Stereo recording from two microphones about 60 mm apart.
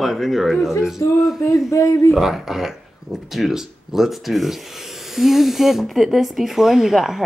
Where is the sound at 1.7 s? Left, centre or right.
Left.